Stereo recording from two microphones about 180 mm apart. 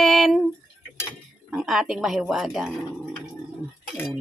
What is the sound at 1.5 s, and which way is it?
Speech, centre (ahead or behind).